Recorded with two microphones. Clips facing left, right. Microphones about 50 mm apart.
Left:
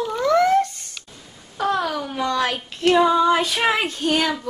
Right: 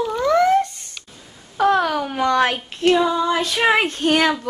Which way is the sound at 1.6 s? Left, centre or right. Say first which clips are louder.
Right 5 dB; right.